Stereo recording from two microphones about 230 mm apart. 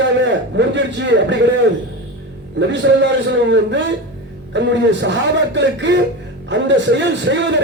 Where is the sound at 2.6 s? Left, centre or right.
Right.